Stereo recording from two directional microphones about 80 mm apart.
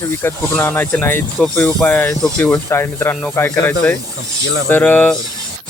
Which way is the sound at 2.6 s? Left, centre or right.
Left.